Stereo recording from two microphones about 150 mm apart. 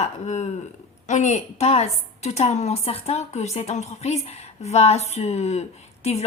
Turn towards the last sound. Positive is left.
turn(degrees=45)  # may be behind; listen again after turning